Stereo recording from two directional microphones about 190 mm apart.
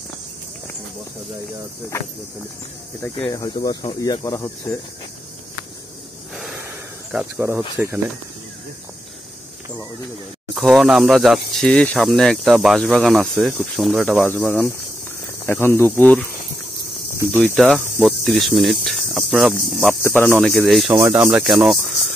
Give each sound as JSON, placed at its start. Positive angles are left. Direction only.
{"t": 3.2, "sound": "speech", "side_deg": 25}
{"t": 7.1, "sound": "speech", "side_deg": -10}
{"t": 10.5, "sound": "speech", "side_deg": 0}
{"t": 17.4, "sound": "speech", "side_deg": 0}
{"t": 20.0, "sound": "speech", "side_deg": 10}
{"t": 20.2, "sound": "speech", "side_deg": 0}
{"t": 20.9, "sound": "speech", "side_deg": -10}